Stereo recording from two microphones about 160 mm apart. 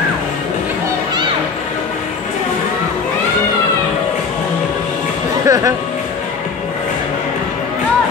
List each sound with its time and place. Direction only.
5.5 s speech: 20° right (ahead or behind)